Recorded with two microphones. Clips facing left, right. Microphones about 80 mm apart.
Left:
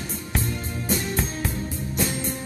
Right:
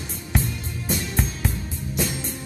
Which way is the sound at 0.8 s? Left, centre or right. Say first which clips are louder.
Even; centre.